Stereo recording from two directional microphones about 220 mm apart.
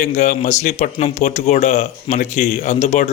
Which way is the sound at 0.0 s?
35° left (ahead or behind).